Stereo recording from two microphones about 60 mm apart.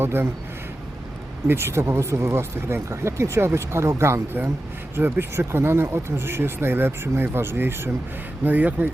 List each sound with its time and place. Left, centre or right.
0.0 s speech: right
1.5 s speech: right
4.9 s speech: right
8.4 s speech: right